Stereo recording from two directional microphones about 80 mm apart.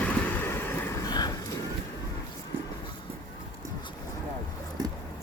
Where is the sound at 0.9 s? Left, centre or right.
Left.